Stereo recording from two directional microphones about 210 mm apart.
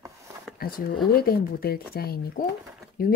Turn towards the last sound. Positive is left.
turn(degrees=45)  # may be behind; listen again after turning